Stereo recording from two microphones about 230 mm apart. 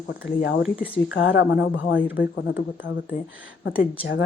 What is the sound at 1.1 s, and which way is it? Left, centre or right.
Speech, left.